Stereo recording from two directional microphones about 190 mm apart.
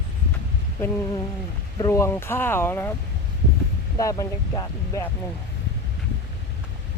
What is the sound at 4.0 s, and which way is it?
Speech, 20° left (ahead or behind).